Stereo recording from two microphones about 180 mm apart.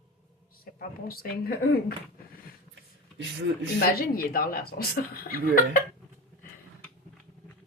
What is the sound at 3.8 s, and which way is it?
A woman's voice, 55° left (ahead or behind).